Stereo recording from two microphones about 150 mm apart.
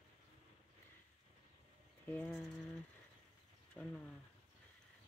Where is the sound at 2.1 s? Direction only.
10° left (ahead or behind).